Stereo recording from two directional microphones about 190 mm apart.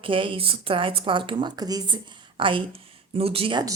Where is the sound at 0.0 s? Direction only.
25° right (ahead or behind).